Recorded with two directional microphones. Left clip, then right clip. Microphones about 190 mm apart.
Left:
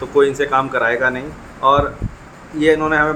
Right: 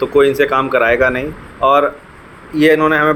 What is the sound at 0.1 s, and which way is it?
Speech, 15° right (ahead or behind).